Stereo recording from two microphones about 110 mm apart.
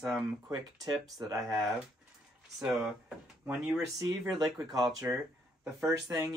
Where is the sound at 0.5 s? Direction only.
35° right (ahead or behind).